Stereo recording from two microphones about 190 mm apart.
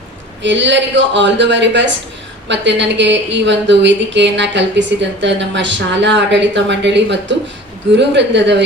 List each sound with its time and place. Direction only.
0.4 s speech: 70° right (ahead or behind)